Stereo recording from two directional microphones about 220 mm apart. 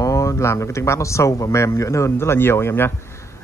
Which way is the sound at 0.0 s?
15° left (ahead or behind).